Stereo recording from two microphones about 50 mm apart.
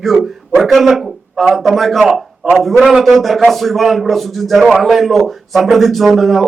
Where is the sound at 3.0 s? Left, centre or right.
Centre.